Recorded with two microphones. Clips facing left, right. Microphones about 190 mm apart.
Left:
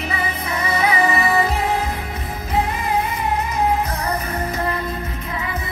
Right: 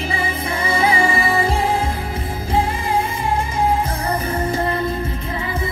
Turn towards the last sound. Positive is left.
turn(degrees=-30)  # may be behind; listen again after turning